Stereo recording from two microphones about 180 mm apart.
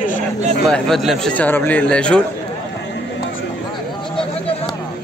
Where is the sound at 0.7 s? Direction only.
Centre (ahead or behind).